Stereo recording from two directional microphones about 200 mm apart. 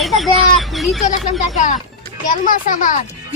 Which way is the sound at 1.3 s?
40° left (ahead or behind).